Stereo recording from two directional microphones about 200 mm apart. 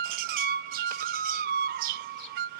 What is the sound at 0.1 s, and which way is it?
Music, 45° right (ahead or behind).